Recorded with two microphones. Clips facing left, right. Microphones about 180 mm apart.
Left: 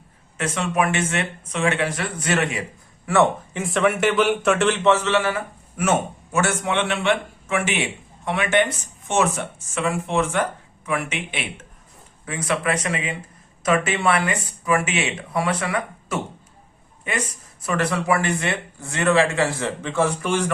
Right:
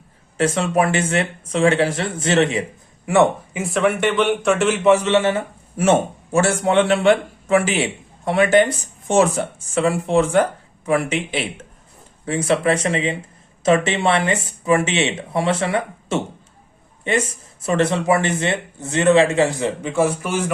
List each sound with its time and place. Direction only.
0.3 s a man's voice: 35° right (ahead or behind); by 3.6 s 15° right (ahead or behind)
3.6 s speech: centre (ahead or behind)
4.9 s a man's voice: 15° right (ahead or behind)